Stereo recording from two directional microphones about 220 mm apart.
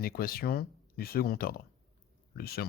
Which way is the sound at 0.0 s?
40° left (ahead or behind).